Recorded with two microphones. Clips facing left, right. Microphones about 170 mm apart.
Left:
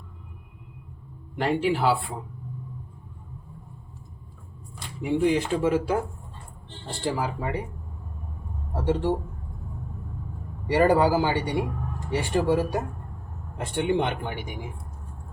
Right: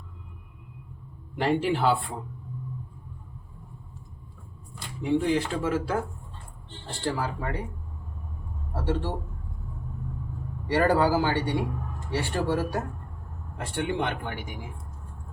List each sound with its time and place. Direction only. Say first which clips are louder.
1.4 s speech: left 1 dB; centre (ahead or behind)
5.0 s speech: left 2 dB; 15° left (ahead or behind)
8.7 s a man's voice: left 5 dB; 15° left (ahead or behind)
10.7 s speech: left 2 dB; 15° left (ahead or behind)